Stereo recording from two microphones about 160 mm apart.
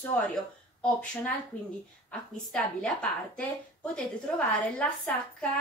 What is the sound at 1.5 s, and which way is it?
A woman's voice, 10° left (ahead or behind).